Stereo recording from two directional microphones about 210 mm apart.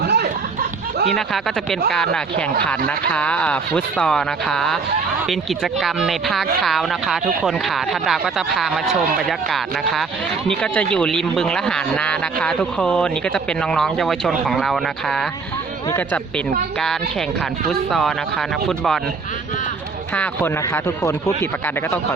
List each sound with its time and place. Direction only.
0.0 s a sound: 50° right (ahead or behind)
1.1 s speech: centre (ahead or behind)
20.1 s speech: 10° left (ahead or behind)